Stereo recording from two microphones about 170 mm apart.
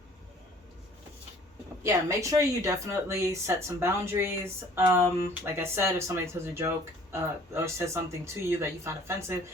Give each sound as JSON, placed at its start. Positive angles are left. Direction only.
{"t": 1.8, "sound": "speech", "side_deg": -15}